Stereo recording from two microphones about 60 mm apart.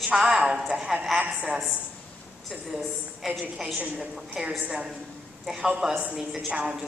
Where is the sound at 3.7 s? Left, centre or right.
Centre.